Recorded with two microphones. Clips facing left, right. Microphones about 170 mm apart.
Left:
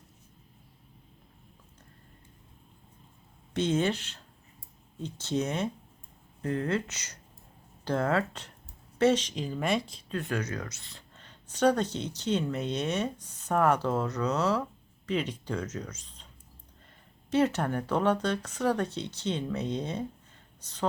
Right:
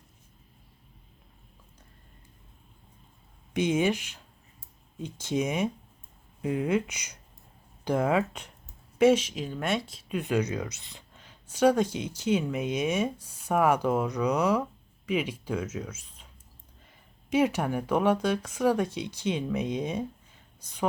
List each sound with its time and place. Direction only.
3.5 s speech: 10° right (ahead or behind)
10.1 s speech: 15° right (ahead or behind)
11.2 s speech: 10° right (ahead or behind)